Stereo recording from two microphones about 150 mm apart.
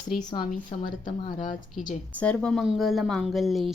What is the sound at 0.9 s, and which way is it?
Speech, 60° left (ahead or behind).